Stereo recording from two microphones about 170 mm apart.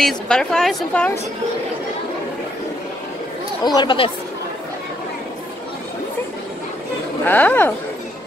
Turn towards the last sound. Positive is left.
turn(degrees=10)  # may be behind; listen again after turning